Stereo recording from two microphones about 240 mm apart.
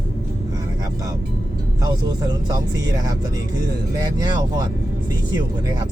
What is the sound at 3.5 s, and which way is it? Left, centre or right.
Speech, centre.